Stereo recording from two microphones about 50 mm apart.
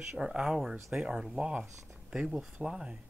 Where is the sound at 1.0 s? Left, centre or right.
Centre.